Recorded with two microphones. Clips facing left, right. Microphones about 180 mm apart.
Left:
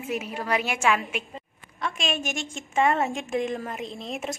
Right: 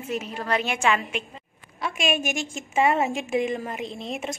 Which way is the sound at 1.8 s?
5° right (ahead or behind).